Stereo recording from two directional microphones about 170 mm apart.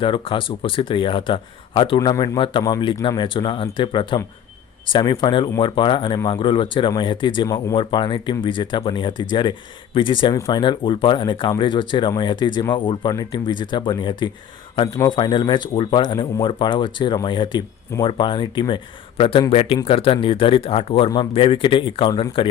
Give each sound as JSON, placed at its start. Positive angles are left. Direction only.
{"t": 0.0, "sound": "speech", "side_deg": 30}